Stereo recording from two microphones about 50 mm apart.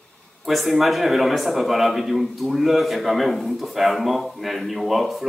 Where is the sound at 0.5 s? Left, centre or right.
Centre.